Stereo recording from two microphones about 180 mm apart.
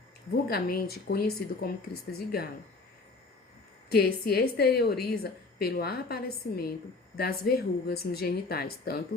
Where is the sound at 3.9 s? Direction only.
60° left (ahead or behind).